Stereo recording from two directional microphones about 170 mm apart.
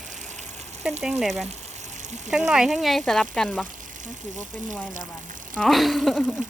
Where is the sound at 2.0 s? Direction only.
45° right (ahead or behind).